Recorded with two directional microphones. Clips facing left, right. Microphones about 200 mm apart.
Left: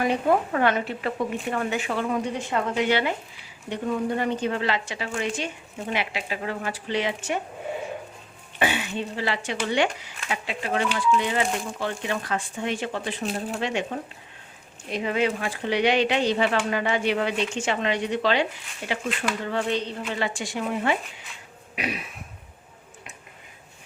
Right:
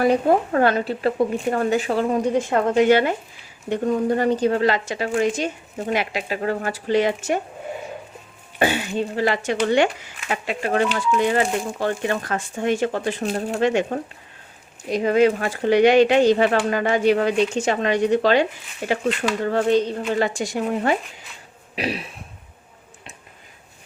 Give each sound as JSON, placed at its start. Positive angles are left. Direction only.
{"t": 0.0, "sound": "speech", "side_deg": -40}
{"t": 8.5, "sound": "speech", "side_deg": -40}